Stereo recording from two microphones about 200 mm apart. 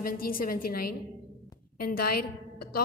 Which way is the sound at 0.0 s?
45° left (ahead or behind).